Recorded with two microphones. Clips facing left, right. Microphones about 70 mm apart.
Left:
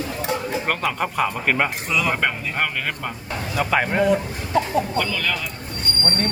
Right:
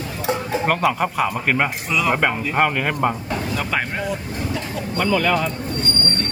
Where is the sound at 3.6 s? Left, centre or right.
Centre.